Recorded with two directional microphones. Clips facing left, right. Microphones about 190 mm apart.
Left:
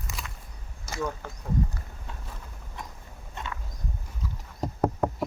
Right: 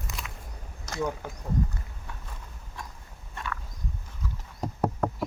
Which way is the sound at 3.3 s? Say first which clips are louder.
Right 1 dB; 20° left (ahead or behind).